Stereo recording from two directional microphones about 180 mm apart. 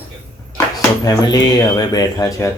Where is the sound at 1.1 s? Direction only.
20° left (ahead or behind).